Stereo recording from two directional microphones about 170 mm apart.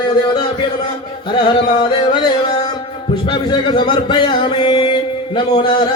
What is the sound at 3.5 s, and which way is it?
Speech, 25° left (ahead or behind).